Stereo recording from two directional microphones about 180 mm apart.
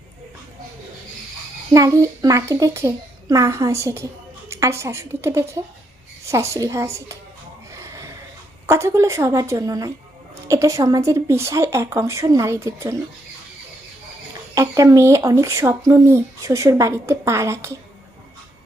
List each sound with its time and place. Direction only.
1.7 s a woman's voice: 20° right (ahead or behind)
7.7 s a sound: 15° right (ahead or behind)
8.6 s speech: 15° right (ahead or behind)
14.5 s speech: 15° right (ahead or behind)